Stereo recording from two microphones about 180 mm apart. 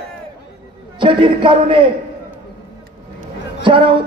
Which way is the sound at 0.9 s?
25° right (ahead or behind).